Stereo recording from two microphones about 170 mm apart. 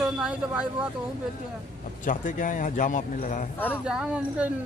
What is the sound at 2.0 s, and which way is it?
Speech, 50° left (ahead or behind).